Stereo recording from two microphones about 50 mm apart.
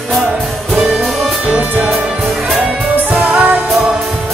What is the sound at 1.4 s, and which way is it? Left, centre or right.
Music, right.